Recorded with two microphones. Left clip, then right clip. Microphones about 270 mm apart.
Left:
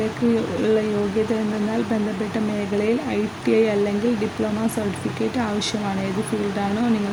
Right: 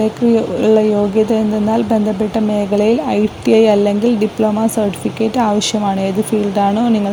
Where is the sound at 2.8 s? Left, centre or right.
Right.